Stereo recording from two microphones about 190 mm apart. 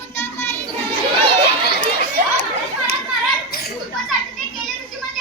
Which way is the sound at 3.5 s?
55° left (ahead or behind).